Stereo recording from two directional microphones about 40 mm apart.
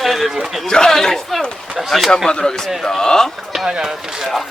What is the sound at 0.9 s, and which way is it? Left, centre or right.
Speech, centre.